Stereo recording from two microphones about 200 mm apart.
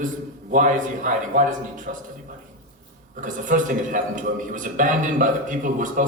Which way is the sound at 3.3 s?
40° right (ahead or behind).